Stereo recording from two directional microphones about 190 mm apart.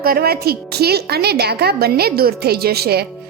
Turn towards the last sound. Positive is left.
turn(degrees=-55)  # may be behind; listen again after turning